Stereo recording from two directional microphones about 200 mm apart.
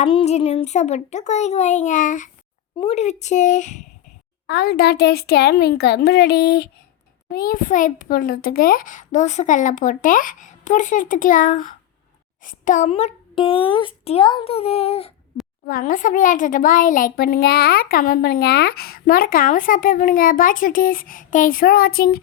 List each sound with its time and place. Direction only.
0.0 s a child's voice: 30° left (ahead or behind)
4.4 s a child's voice: 55° left (ahead or behind); by 15.1 s 30° left (ahead or behind)
15.6 s speech: 45° left (ahead or behind)